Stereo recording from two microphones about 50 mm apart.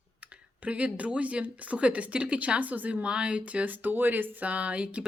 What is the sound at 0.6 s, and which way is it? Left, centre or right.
Speech, right.